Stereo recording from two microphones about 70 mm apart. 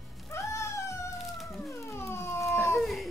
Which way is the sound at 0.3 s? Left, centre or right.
Left.